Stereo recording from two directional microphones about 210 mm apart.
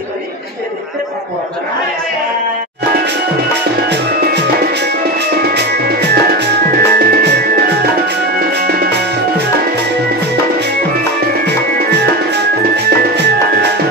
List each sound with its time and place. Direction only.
3.9 s music: 50° right (ahead or behind)
12.3 s music: 55° right (ahead or behind)